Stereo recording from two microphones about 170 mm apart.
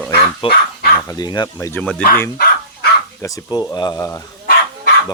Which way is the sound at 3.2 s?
20° left (ahead or behind).